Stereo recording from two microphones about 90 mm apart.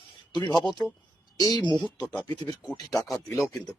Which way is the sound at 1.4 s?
50° left (ahead or behind).